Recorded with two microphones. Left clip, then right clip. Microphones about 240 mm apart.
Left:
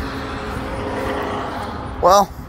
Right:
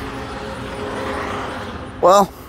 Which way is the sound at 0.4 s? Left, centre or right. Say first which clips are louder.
Left 1 dB; right.